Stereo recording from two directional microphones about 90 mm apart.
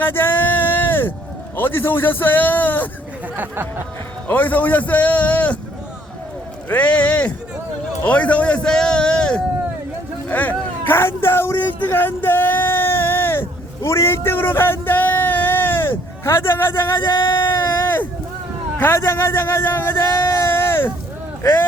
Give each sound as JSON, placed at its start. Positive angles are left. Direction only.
{"t": 0.0, "sound": "a sound", "side_deg": 25}
{"t": 1.5, "sound": "a man's voice", "side_deg": 25}
{"t": 3.3, "sound": "speech", "side_deg": -20}
{"t": 4.3, "sound": "a man's voice", "side_deg": 20}
{"t": 6.7, "sound": "a man's voice", "side_deg": 15}
{"t": 10.2, "sound": "a sound", "side_deg": 15}
{"t": 18.8, "sound": "a man's voice", "side_deg": 25}